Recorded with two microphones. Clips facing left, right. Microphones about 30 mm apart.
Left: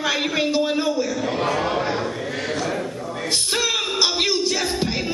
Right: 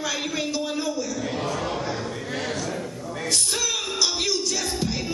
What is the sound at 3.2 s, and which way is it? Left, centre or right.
Music, left.